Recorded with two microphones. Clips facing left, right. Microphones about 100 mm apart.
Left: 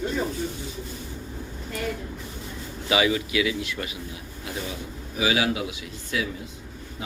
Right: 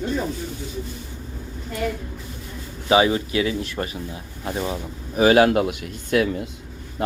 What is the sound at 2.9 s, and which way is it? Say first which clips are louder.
Speech: right 5 dB; 35° right (ahead or behind).